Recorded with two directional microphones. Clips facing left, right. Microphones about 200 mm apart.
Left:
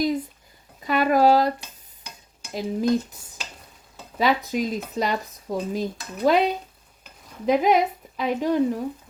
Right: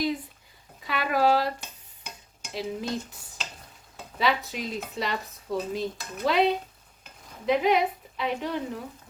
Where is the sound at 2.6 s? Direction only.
40° left (ahead or behind).